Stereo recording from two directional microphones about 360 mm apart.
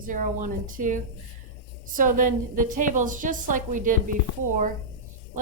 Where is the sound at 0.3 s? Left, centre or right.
Right.